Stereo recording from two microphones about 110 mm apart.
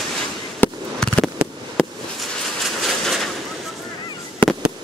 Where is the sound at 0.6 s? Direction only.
10° left (ahead or behind).